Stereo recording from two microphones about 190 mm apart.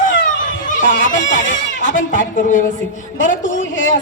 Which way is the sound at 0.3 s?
45° left (ahead or behind).